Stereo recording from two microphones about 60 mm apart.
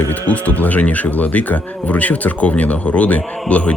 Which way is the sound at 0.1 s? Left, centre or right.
Left.